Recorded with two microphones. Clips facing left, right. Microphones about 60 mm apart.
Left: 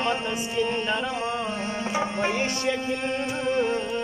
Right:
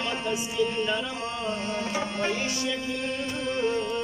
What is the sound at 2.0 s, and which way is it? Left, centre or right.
Music, left.